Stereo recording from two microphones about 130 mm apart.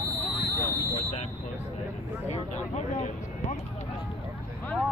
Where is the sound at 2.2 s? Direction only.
60° left (ahead or behind).